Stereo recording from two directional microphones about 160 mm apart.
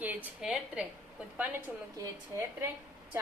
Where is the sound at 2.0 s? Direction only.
15° right (ahead or behind).